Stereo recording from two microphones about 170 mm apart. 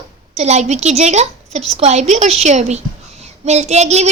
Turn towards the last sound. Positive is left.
turn(degrees=-40)  # may be behind; listen again after turning